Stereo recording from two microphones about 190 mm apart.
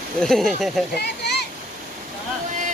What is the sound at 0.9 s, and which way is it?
Speech, 60° left (ahead or behind).